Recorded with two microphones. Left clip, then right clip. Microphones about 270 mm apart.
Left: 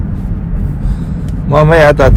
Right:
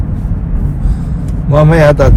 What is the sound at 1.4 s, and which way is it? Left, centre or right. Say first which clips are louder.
Speech: left 2 dB; left.